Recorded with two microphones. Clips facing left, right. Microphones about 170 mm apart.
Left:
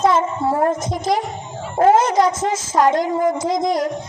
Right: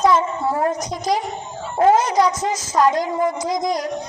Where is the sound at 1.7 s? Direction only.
50° left (ahead or behind).